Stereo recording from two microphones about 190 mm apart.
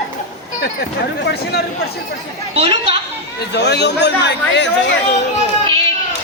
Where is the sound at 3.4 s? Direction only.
65° left (ahead or behind).